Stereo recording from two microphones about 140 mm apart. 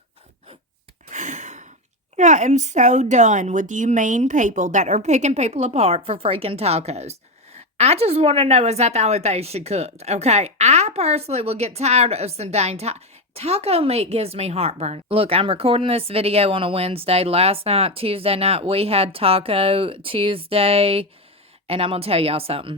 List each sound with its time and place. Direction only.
1.1 s gasp: 60° right (ahead or behind)
2.1 s a woman's voice: 60° right (ahead or behind); by 22.8 s 40° right (ahead or behind)